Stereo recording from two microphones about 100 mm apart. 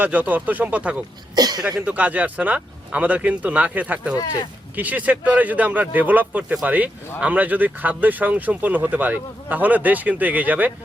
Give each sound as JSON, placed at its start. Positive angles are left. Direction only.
{"t": 0.0, "sound": "speech", "side_deg": -15}
{"t": 1.4, "sound": "speech", "side_deg": -40}
{"t": 1.8, "sound": "speech", "side_deg": -15}
{"t": 4.2, "sound": "speech", "side_deg": 45}
{"t": 4.7, "sound": "speech", "side_deg": -15}